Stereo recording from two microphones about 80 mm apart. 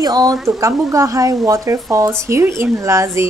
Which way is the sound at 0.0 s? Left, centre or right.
Right.